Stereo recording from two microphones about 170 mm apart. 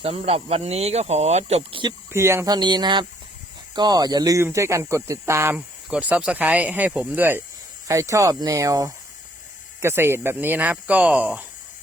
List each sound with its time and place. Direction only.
0.0 s speech: 35° right (ahead or behind)
2.1 s speech: 15° right (ahead or behind)